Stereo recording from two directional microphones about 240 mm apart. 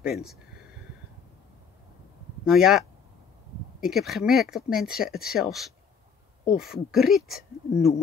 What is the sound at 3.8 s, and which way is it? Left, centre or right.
Speech, centre.